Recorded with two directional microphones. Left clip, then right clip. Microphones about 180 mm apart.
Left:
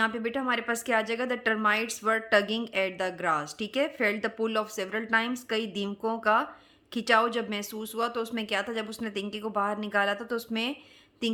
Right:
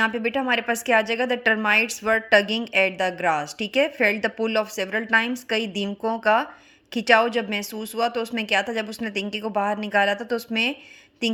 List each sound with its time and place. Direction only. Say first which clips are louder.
0.0 s a woman's voice: right 6 dB; 20° right (ahead or behind)